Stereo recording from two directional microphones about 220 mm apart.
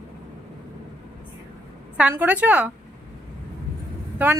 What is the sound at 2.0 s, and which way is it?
Speech, 5° right (ahead or behind).